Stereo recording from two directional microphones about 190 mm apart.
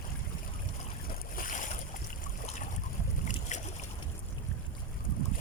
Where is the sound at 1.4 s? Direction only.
45° left (ahead or behind).